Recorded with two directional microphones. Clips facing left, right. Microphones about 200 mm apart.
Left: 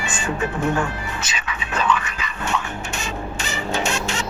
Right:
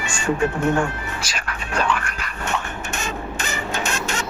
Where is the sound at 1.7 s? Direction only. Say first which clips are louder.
Left 1 dB; 10° right (ahead or behind).